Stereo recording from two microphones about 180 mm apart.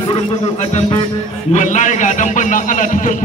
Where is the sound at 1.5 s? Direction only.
45° left (ahead or behind).